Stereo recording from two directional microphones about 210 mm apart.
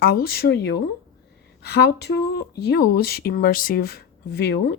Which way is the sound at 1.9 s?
50° left (ahead or behind).